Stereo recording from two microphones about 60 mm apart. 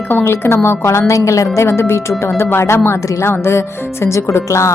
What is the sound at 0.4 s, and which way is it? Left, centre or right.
A woman's voice, left.